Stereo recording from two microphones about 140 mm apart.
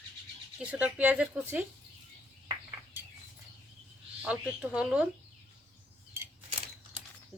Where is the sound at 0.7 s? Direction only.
10° right (ahead or behind).